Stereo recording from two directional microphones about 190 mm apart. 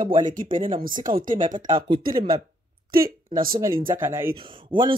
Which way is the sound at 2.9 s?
50° right (ahead or behind).